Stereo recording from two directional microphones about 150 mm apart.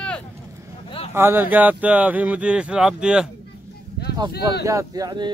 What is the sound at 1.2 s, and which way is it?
Speech, 15° right (ahead or behind).